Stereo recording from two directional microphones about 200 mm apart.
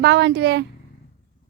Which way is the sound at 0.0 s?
60° right (ahead or behind).